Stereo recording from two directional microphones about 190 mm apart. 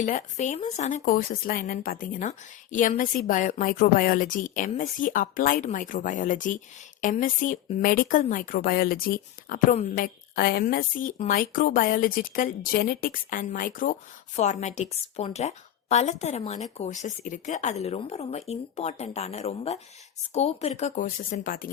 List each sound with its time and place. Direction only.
0.0 s speech: 40° left (ahead or behind)